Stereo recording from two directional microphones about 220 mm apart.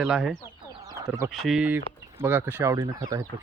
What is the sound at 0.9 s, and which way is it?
Speech, 15° right (ahead or behind).